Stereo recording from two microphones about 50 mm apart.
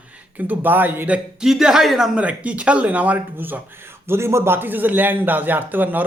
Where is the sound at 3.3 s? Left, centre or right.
Right.